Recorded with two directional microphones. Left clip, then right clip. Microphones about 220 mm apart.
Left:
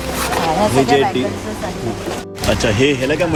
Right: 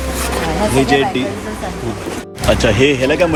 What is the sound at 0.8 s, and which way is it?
Speech, 5° left (ahead or behind).